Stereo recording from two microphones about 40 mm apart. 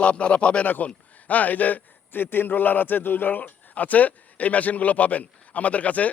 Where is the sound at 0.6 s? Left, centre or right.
Left.